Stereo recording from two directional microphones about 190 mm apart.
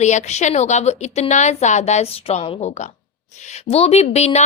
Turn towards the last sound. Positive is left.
turn(degrees=35)  # may be behind; listen again after turning